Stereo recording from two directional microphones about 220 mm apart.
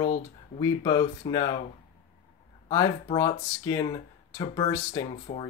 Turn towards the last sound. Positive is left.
turn(degrees=25)  # may be behind; listen again after turning